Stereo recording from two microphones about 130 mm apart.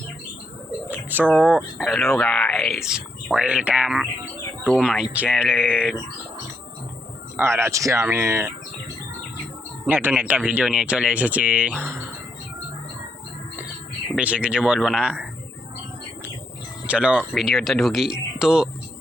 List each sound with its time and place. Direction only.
0.9 s bird: 15° right (ahead or behind)
1.8 s speech: centre (ahead or behind)
7.3 s speech: 20° right (ahead or behind)
9.8 s speech: 15° right (ahead or behind)
14.2 s speech: 10° right (ahead or behind)
16.8 s speech: 10° right (ahead or behind)